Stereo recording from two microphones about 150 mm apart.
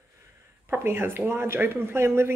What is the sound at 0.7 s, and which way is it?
Speech, 15° right (ahead or behind).